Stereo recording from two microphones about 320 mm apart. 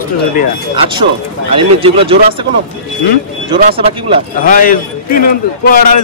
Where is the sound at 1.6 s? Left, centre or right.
Centre.